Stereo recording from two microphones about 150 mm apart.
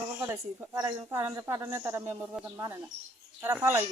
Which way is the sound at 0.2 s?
20° right (ahead or behind).